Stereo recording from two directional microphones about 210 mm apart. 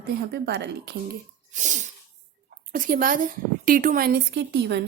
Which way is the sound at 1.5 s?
35° right (ahead or behind).